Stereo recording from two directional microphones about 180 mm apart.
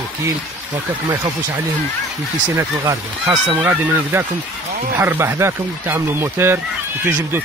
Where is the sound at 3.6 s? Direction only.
15° right (ahead or behind).